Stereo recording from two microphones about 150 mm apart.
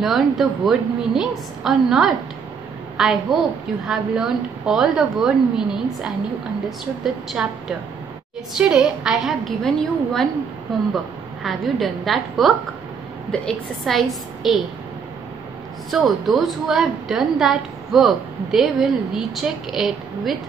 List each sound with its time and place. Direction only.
0.0 s a woman's voice: centre (ahead or behind)
7.4 s a woman's voice: 5° right (ahead or behind)
8.5 s a woman's voice: 5° right (ahead or behind)
11.4 s a woman's voice: centre (ahead or behind)
15.9 s a woman's voice: centre (ahead or behind)